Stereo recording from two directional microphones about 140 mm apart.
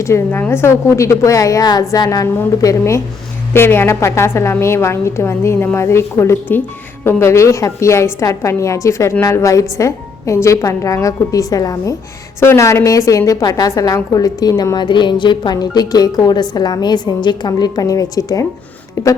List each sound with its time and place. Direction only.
0.0 s a woman's voice: 20° left (ahead or behind)